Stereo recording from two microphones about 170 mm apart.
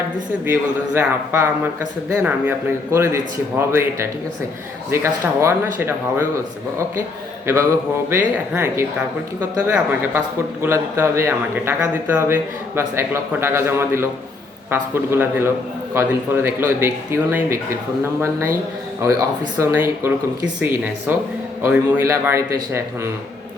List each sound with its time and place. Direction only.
0.4 s a man's voice: 15° right (ahead or behind)
7.4 s mantra: 15° right (ahead or behind)
8.1 s a man's voice: 15° right (ahead or behind)
19.6 s a man's voice: 15° right (ahead or behind)